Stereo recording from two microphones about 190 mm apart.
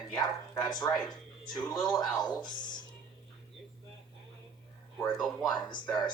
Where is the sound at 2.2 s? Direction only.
20° left (ahead or behind).